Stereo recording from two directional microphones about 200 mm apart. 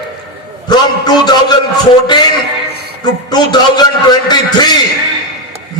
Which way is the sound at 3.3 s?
20° left (ahead or behind).